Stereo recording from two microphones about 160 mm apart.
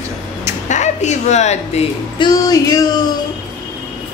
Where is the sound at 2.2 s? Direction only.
25° left (ahead or behind).